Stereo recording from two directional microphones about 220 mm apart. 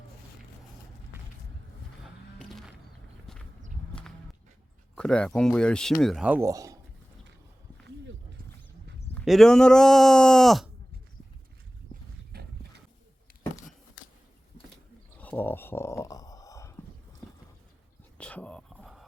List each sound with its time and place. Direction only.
2.4 s music: centre (ahead or behind)
3.3 s horse: centre (ahead or behind)
4.9 s speech: 5° left (ahead or behind); by 6.7 s 15° right (ahead or behind)
9.1 s speech: centre (ahead or behind)
12.3 s horse: 45° right (ahead or behind)
15.2 s a sound: 10° left (ahead or behind)
18.2 s a sound: 5° left (ahead or behind)